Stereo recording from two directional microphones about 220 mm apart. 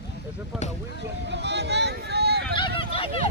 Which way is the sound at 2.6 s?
25° left (ahead or behind).